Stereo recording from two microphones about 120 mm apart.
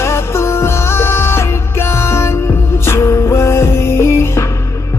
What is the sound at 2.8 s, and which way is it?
Music, 20° left (ahead or behind).